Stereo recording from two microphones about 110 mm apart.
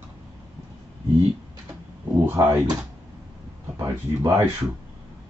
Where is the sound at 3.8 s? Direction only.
40° right (ahead or behind).